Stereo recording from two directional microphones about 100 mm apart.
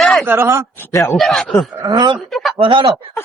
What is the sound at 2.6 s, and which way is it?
Speech, 50° right (ahead or behind).